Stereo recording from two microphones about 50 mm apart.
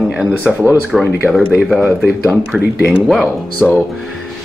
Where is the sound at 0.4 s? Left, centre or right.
Right.